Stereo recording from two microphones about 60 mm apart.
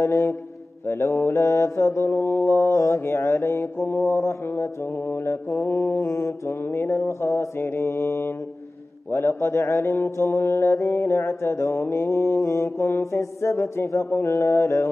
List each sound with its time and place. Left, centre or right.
0.0 s mantra: left
5.1 s mantra: left
12.4 s mantra: left